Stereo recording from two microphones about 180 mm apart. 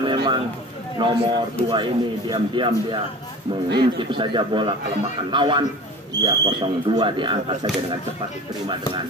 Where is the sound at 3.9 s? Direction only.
25° right (ahead or behind).